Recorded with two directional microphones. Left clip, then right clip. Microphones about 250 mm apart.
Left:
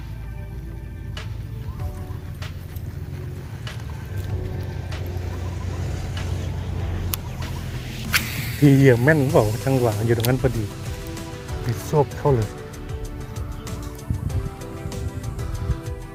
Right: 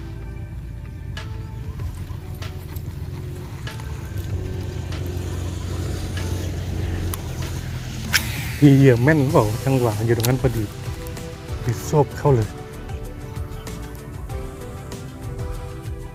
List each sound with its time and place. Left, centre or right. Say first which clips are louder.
5.2 s vehicle: right 2 dB; right
8.1 s speech: right 1 dB; centre
11.9 s speech: right 1 dB; centre